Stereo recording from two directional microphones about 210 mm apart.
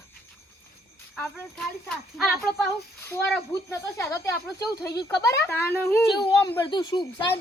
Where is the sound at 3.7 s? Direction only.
15° left (ahead or behind).